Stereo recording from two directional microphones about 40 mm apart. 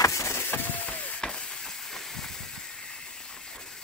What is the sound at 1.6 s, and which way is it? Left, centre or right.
Hiss, centre.